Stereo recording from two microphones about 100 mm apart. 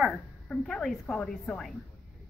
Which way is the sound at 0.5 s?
5° left (ahead or behind).